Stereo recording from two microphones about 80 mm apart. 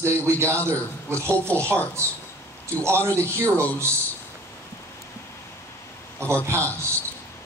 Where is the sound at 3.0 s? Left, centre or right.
Left.